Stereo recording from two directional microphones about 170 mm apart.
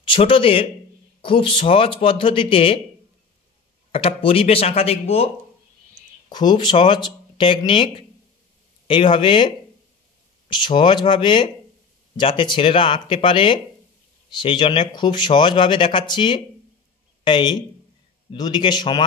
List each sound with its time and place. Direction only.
0.0 s speech: 30° left (ahead or behind)
3.9 s speech: 35° left (ahead or behind)
10.5 s speech: 30° left (ahead or behind)